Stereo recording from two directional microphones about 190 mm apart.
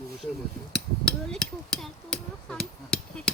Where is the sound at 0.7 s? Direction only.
5° left (ahead or behind).